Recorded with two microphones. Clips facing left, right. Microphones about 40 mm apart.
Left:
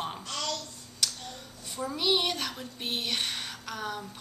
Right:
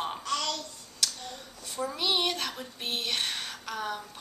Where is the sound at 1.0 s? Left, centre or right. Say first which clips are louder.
Even; centre.